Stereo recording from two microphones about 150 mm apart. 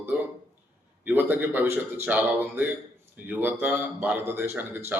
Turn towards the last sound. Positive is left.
turn(degrees=-15)  # may be behind; listen again after turning